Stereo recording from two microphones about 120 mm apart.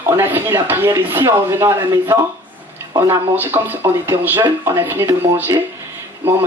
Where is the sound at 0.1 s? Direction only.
15° right (ahead or behind).